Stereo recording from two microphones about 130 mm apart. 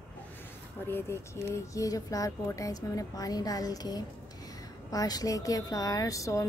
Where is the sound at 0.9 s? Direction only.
20° left (ahead or behind).